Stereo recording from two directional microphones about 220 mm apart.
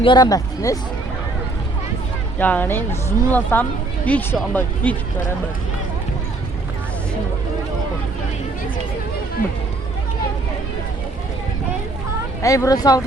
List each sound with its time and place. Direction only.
0.0 s speech: 20° left (ahead or behind)
2.4 s speech: 10° left (ahead or behind)
12.4 s speech: 15° left (ahead or behind)